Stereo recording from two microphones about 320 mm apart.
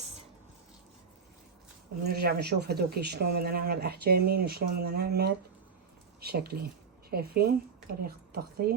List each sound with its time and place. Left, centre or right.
2.0 s a woman's voice: right